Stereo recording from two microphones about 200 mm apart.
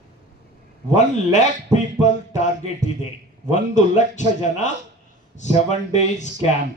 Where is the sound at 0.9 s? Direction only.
35° left (ahead or behind).